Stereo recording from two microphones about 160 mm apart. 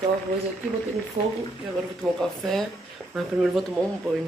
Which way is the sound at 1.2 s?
45° right (ahead or behind).